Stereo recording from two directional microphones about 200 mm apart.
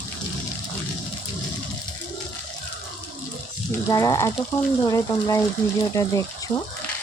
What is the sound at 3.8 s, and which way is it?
Speech, 15° left (ahead or behind).